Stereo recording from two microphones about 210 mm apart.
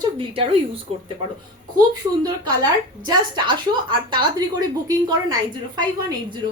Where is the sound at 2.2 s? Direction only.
20° right (ahead or behind).